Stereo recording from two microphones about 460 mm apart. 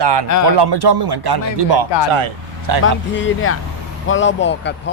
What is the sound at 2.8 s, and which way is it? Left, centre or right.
Speech, left.